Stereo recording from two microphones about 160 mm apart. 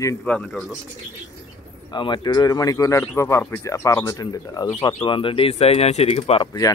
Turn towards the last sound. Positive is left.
turn(degrees=35)  # may be behind; listen again after turning